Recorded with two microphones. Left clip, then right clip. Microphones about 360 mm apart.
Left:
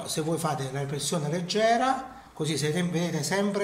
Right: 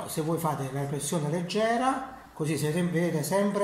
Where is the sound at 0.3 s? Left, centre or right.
Left.